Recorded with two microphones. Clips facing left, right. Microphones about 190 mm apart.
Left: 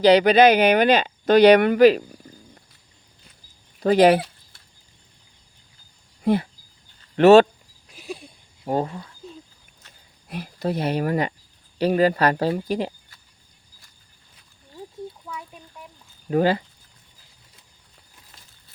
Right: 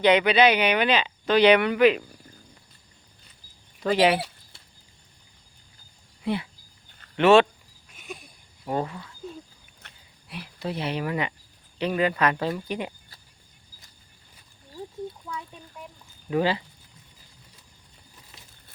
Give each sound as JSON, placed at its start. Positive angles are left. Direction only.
{"t": 0.0, "sound": "speech", "side_deg": 35}
{"t": 3.8, "sound": "speech", "side_deg": 45}
{"t": 6.2, "sound": "speech", "side_deg": 45}
{"t": 7.9, "sound": "a sound", "side_deg": 35}
{"t": 9.8, "sound": "a sound", "side_deg": -60}
{"t": 10.2, "sound": "speech", "side_deg": 45}
{"t": 16.3, "sound": "speech", "side_deg": 45}